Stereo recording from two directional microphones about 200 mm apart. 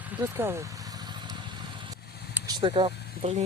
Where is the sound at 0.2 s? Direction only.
10° right (ahead or behind).